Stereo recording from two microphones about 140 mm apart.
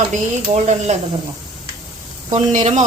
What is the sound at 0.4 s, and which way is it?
Speech, 55° right (ahead or behind).